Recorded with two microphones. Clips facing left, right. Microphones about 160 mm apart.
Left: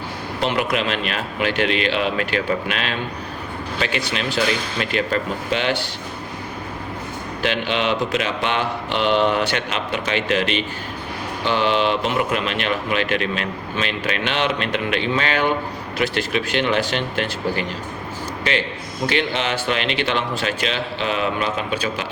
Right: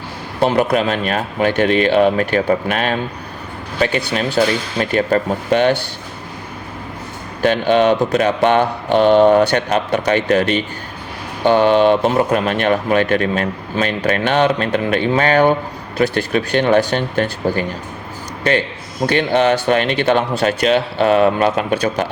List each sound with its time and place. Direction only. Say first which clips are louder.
0.5 s speech: right 5 dB; 40° right (ahead or behind)
7.4 s speech: right 9 dB; 45° right (ahead or behind)
19.0 s speech: right 8 dB; 45° right (ahead or behind)